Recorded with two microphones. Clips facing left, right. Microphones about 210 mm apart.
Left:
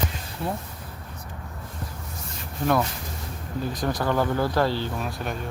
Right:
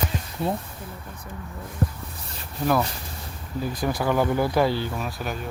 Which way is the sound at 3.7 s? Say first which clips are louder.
Right 1 dB; 10° right (ahead or behind).